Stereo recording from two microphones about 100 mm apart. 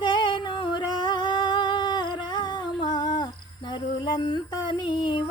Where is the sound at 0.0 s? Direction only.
50° left (ahead or behind).